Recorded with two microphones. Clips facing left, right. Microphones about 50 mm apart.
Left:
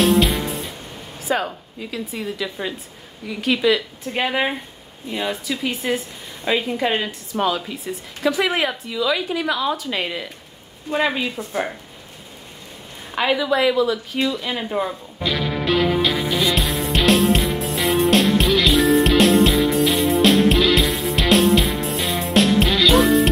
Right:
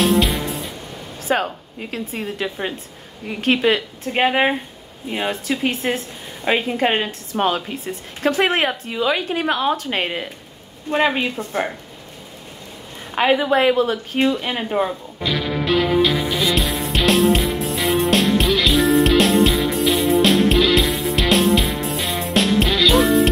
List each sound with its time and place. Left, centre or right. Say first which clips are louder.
0.0 s music: left 1 dB; centre
1.2 s a woman's voice: right 2 dB; right
13.1 s a woman's voice: right 3 dB; right
13.4 s a woman's voice: right 2 dB; right
14.6 s speech: right 2 dB; right
15.1 s music: even; centre